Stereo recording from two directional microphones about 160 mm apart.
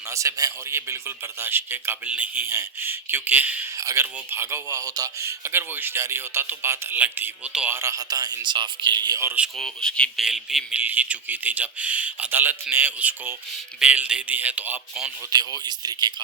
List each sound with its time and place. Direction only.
0.1 s a man's voice: 20° right (ahead or behind)
7.8 s speech: 20° right (ahead or behind)
9.6 s a man's voice: 5° left (ahead or behind)
15.3 s speech: 25° right (ahead or behind)